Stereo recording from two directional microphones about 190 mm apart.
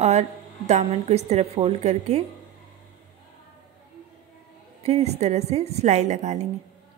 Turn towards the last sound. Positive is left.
turn(degrees=-40)  # may be behind; listen again after turning